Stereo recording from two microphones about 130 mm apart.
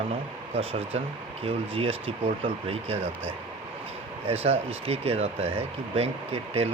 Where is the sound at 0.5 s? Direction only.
50° right (ahead or behind).